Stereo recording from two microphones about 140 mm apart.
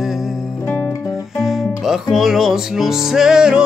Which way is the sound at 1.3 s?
Centre (ahead or behind).